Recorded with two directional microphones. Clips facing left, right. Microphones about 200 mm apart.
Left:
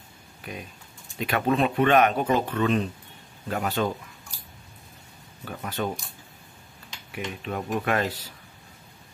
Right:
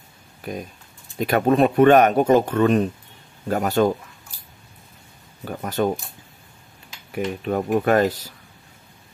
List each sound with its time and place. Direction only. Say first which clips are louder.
0.4 s speech: right 7 dB; 40° right (ahead or behind)
5.4 s speech: right 7 dB; 45° right (ahead or behind)
7.1 s speech: right 8 dB; 45° right (ahead or behind)